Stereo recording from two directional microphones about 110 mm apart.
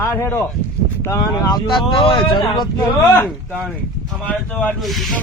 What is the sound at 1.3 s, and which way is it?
Speech, 35° left (ahead or behind).